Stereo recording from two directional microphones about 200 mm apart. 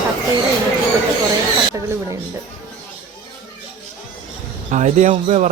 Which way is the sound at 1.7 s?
15° right (ahead or behind).